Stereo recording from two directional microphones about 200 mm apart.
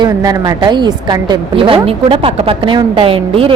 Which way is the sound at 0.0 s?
20° right (ahead or behind).